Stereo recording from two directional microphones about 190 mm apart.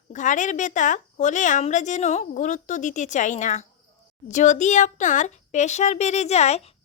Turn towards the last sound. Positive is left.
turn(degrees=35)  # may be behind; listen again after turning